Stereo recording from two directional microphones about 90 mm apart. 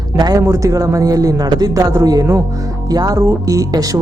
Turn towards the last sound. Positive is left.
turn(degrees=-40)  # may be behind; listen again after turning